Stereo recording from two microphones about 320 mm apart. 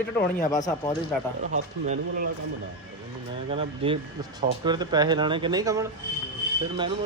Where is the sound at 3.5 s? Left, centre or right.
Centre.